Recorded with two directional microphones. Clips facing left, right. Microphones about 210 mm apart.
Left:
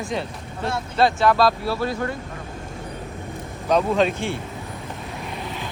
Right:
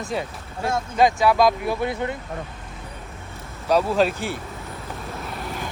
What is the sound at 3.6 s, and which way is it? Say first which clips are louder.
Speech: even; 5° right (ahead or behind).